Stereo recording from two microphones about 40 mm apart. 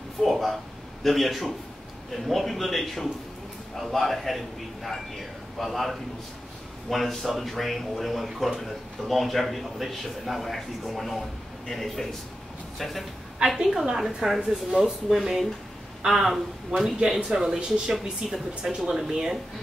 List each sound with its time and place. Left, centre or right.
0.2 s a man's voice: centre; by 18.8 s right
18.9 s speech: centre